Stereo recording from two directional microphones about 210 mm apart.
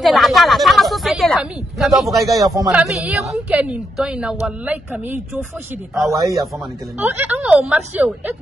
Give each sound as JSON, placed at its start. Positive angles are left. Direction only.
{"t": 0.0, "sound": "a woman's voice", "side_deg": 0}
{"t": 2.0, "sound": "a woman's voice", "side_deg": -15}
{"t": 2.8, "sound": "a woman's voice", "side_deg": -5}